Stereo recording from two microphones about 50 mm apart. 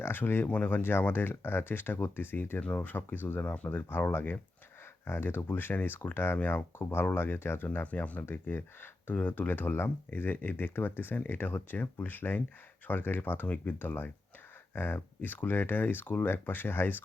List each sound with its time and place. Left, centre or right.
0.0 s speech: left
0.4 s speech: left
0.8 s speech: left
3.4 s speech: left
3.7 s speech: left
6.7 s speech: left
7.9 s speech: left
8.3 s speech: left